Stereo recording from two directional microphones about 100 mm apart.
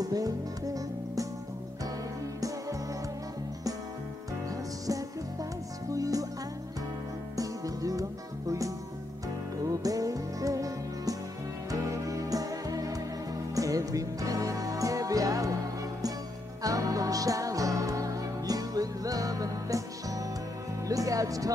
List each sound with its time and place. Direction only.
0.0 s music: 40° right (ahead or behind)
4.5 s music: 35° right (ahead or behind)
7.3 s music: 35° right (ahead or behind)